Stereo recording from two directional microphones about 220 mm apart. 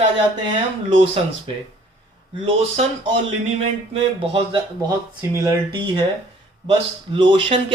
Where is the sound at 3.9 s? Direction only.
25° right (ahead or behind).